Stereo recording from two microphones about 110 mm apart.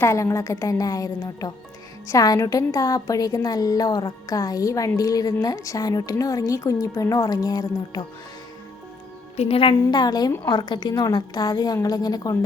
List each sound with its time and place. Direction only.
0.0 s a woman's voice: 25° left (ahead or behind)
9.3 s a woman's voice: 60° left (ahead or behind)
9.9 s a woman's voice: 35° left (ahead or behind)